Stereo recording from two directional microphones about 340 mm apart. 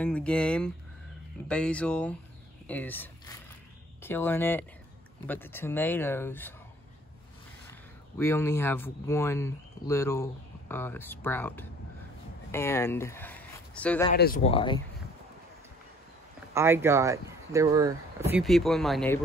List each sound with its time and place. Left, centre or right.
0.0 s speech: centre
8.2 s speech: centre
14.1 s speech: left
16.5 s speech: centre